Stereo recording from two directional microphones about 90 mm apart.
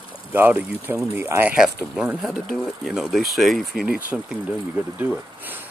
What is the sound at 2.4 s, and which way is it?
Speech, centre (ahead or behind).